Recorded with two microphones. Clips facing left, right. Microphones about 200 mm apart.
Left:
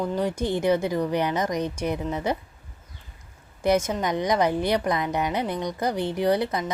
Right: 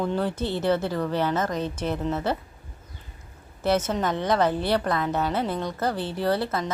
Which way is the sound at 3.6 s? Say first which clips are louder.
Left 1 dB; 10° left (ahead or behind).